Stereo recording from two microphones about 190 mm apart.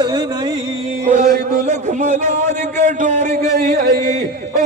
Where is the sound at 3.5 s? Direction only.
50° right (ahead or behind).